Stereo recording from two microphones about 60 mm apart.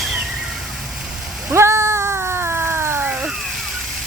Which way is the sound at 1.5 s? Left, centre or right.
Right.